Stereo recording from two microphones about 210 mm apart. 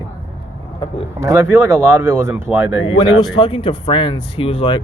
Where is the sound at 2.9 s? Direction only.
20° left (ahead or behind).